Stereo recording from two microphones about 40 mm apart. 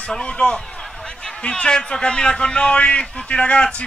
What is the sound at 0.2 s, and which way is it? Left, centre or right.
A man's voice, left.